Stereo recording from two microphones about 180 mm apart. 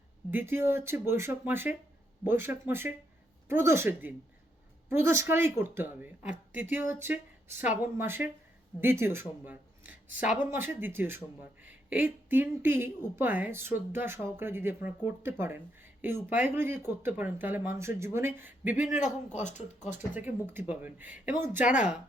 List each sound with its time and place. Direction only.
0.3 s speech: 10° right (ahead or behind)
18.8 s a man's voice: 45° left (ahead or behind)
20.1 s speech: 10° right (ahead or behind)